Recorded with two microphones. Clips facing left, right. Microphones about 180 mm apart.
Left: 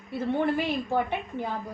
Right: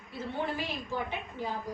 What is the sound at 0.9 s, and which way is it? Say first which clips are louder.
Speech: left 8 dB; 60° left (ahead or behind).